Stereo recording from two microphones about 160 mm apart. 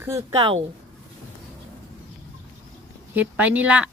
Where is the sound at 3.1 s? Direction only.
10° right (ahead or behind).